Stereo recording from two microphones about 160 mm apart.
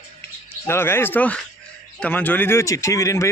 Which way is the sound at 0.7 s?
15° left (ahead or behind).